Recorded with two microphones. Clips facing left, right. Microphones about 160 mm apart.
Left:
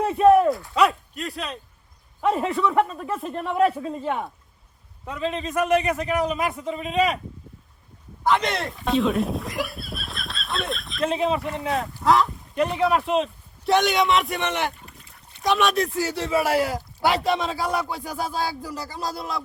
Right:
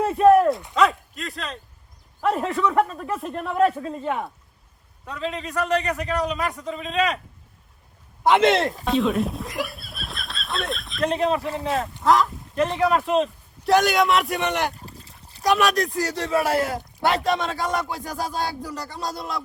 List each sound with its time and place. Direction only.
0.0 s a sound: centre (ahead or behind)
2.2 s a man's voice: centre (ahead or behind)
5.0 s a man's voice: 20° left (ahead or behind)
6.8 s a man's voice: 5° left (ahead or behind)
8.4 s speech: 25° right (ahead or behind)
8.8 s a man's voice: centre (ahead or behind)
14.8 s a sound: 30° right (ahead or behind)
15.4 s a man's voice: centre (ahead or behind)